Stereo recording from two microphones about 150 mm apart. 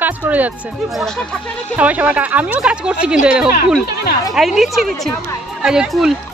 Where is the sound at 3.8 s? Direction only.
90° left.